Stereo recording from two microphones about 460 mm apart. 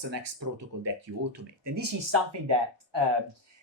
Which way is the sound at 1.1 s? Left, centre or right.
Right.